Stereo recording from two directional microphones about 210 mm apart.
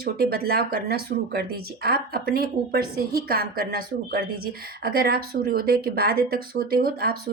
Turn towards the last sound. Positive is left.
turn(degrees=-45)  # may be behind; listen again after turning